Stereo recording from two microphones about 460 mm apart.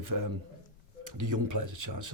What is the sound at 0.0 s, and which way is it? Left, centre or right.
A man's voice, right.